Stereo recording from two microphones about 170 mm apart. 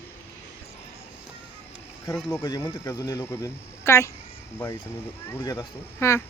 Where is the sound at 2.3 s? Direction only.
20° left (ahead or behind).